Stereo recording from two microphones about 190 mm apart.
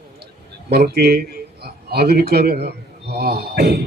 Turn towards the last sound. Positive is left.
turn(degrees=-55)  # may be behind; listen again after turning